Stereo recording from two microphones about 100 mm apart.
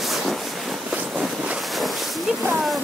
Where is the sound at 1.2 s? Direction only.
5° right (ahead or behind).